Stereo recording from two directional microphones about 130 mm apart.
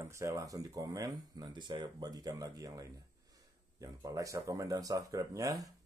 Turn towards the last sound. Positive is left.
turn(degrees=-25)  # may be behind; listen again after turning